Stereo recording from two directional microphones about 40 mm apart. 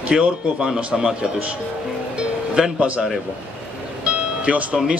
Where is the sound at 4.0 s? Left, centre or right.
Right.